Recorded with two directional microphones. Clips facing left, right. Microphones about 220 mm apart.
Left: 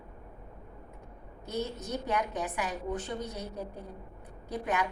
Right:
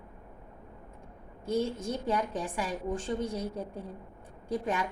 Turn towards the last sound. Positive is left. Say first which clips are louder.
# right 1 dB
turn(degrees=-30)  # may be behind; listen again after turning